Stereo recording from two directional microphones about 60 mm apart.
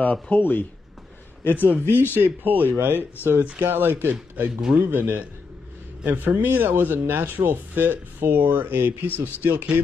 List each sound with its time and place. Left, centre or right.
0.0 s a man's voice: left
2.1 s speech: right